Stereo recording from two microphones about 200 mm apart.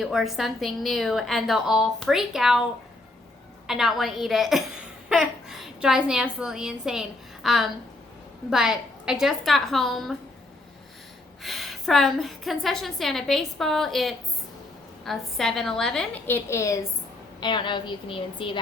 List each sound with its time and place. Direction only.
0.0 s a woman's voice: centre (ahead or behind)
3.7 s a woman's voice: centre (ahead or behind)
11.4 s a woman's voice: centre (ahead or behind); by 18.6 s 25° left (ahead or behind)